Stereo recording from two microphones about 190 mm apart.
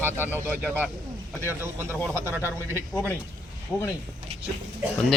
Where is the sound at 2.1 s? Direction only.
10° right (ahead or behind).